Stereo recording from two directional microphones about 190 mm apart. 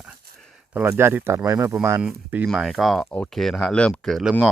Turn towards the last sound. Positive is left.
turn(degrees=0)  # may be behind; listen again after turning